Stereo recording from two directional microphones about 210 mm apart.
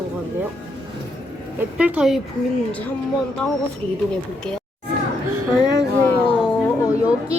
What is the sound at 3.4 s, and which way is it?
Speech, 10° left (ahead or behind).